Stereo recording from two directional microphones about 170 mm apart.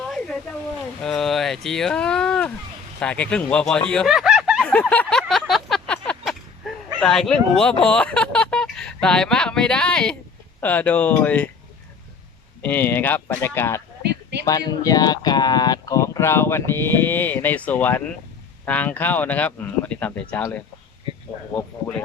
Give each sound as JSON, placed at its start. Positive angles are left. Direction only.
{"t": 0.0, "sound": "a sound", "side_deg": 0}
{"t": 1.0, "sound": "speech", "side_deg": 5}
{"t": 4.7, "sound": "a sound", "side_deg": 10}
{"t": 7.0, "sound": "speech", "side_deg": 5}
{"t": 12.6, "sound": "speech", "side_deg": 10}
{"t": 21.5, "sound": "speech", "side_deg": 10}